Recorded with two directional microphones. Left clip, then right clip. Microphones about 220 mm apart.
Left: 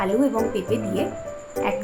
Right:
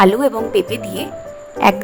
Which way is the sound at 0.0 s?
50° right (ahead or behind).